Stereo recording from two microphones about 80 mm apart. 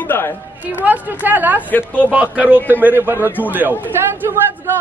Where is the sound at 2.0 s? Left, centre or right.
Centre.